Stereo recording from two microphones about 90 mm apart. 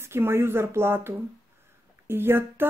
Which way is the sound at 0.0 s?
25° right (ahead or behind).